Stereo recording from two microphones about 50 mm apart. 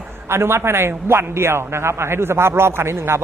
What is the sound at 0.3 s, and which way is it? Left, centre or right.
A man's voice, right.